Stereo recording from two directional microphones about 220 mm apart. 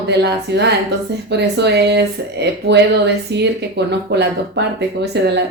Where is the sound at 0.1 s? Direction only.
50° right (ahead or behind).